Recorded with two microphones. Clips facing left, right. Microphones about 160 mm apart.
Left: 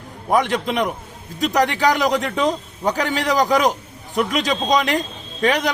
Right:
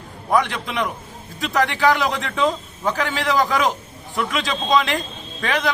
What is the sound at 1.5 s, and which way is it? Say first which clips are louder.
A man's voice: even; 15° left (ahead or behind).